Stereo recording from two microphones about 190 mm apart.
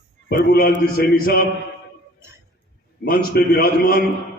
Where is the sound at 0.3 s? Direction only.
55° left (ahead or behind).